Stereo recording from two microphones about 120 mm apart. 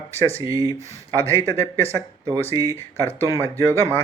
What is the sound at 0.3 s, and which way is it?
Speech, 30° right (ahead or behind).